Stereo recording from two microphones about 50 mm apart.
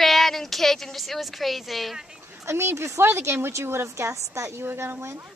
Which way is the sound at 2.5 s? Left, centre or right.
Right.